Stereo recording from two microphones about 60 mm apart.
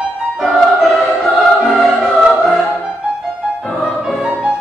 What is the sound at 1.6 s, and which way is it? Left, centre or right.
Music, centre.